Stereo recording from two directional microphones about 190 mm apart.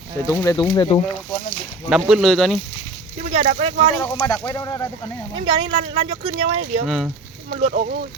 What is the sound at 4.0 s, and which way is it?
Speech, 10° left (ahead or behind).